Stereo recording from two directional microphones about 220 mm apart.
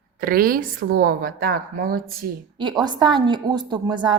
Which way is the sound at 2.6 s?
20° right (ahead or behind).